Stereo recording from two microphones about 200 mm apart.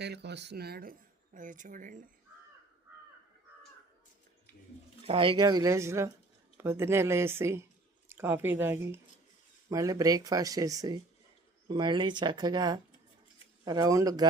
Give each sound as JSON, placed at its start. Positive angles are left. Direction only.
{"t": 0.0, "sound": "speech", "side_deg": -55}
{"t": 5.0, "sound": "speech", "side_deg": -25}